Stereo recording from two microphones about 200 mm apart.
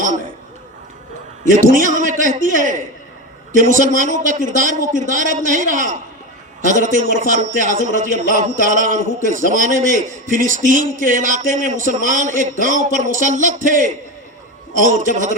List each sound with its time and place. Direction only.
1.5 s a man's voice: 40° right (ahead or behind)